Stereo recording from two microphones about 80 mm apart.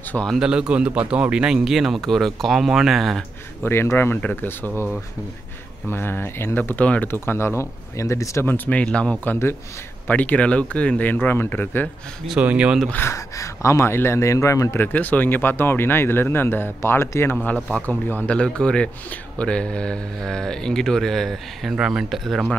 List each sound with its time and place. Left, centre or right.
0.4 s a man's voice: centre
3.6 s speech: left
5.9 s speech: left
7.1 s speech: left
8.5 s speech: left
9.2 s speech: left
12.4 s speech: centre
13.1 s speech: left
14.9 s speech: left
17.6 s speech: centre
17.8 s speech: left
18.3 s speech: centre
21.7 s a man's voice: centre